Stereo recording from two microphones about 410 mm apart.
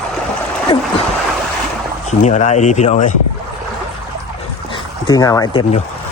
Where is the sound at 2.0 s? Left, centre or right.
Centre.